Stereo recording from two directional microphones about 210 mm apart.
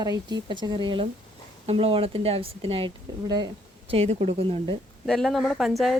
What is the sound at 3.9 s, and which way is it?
Speech, 30° right (ahead or behind).